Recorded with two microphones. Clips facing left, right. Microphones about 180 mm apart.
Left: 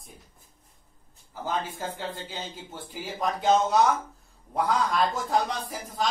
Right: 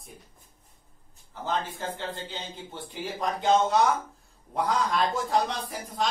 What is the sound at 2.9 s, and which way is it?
Speech, 5° left (ahead or behind).